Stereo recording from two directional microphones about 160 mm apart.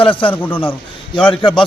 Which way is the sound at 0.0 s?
30° left (ahead or behind).